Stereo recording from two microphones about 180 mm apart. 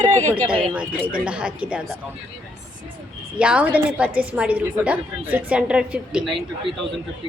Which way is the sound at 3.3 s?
5° right (ahead or behind).